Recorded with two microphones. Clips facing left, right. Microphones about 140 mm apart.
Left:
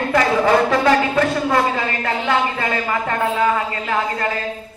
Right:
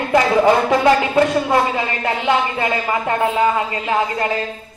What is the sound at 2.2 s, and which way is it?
Speech, 20° right (ahead or behind).